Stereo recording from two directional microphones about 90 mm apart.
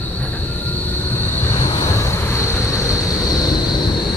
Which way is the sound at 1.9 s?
30° left (ahead or behind).